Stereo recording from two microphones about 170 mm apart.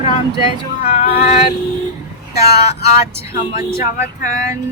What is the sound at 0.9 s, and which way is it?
Female singing, 40° left (ahead or behind).